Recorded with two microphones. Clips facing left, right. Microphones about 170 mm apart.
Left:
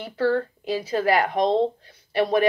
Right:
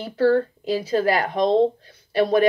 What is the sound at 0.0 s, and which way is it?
Speech, 35° right (ahead or behind).